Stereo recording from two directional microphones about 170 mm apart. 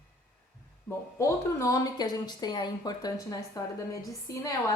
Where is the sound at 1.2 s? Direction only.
20° left (ahead or behind).